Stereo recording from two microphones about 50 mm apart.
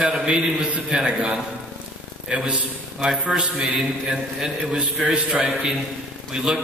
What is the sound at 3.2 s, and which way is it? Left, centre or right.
Mantra, centre.